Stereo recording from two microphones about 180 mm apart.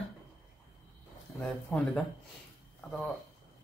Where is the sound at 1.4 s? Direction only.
5° left (ahead or behind).